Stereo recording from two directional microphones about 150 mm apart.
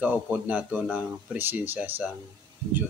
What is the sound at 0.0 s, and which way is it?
Speech, 10° right (ahead or behind).